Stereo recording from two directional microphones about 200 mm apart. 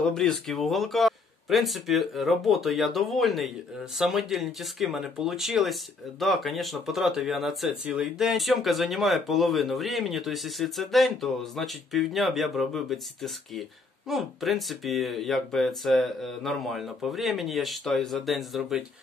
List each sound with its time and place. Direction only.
0.0 s speech: centre (ahead or behind)